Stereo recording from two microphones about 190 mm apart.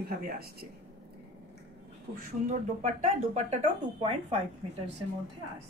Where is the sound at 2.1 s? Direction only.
55° right (ahead or behind).